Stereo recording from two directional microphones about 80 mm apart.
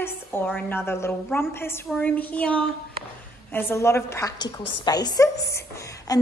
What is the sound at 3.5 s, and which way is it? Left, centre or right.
Speech, left.